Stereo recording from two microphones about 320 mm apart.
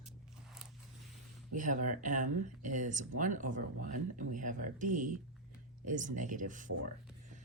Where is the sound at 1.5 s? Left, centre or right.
Right.